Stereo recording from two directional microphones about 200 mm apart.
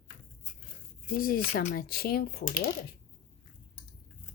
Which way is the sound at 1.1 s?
45° left (ahead or behind).